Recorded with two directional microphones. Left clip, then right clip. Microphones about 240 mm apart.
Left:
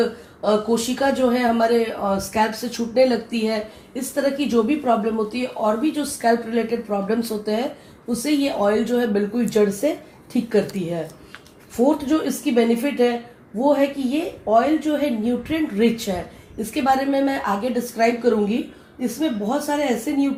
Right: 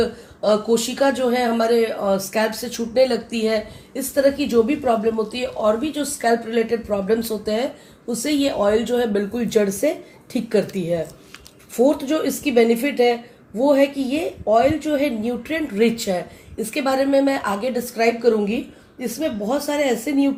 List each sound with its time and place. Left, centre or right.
0.4 s speech: right